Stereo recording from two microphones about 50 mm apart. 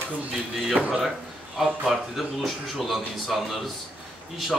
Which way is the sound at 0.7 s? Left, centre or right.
Centre.